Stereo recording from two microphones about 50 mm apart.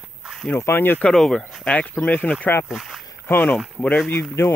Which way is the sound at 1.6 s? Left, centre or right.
Left.